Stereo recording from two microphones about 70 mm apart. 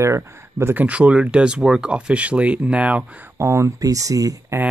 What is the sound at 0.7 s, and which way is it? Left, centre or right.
Speech, centre.